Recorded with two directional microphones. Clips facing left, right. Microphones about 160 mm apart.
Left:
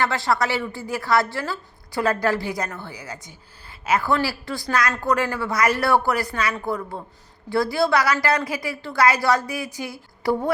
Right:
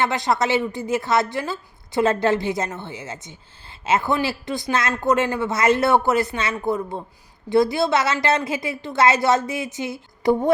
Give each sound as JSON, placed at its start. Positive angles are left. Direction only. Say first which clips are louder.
{"t": 0.0, "sound": "a woman's voice", "louder": "right 1 dB", "side_deg": -20}